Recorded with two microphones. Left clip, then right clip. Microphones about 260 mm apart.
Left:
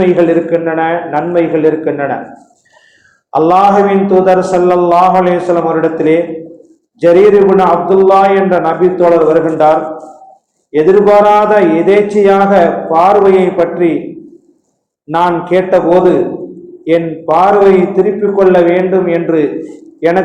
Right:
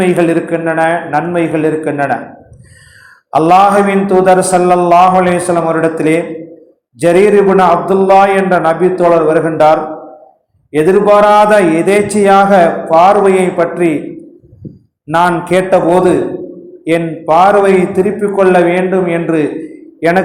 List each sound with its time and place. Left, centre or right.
0.0 s mantra: right
3.3 s mantra: right
15.0 s mantra: right
20.0 s a man's voice: right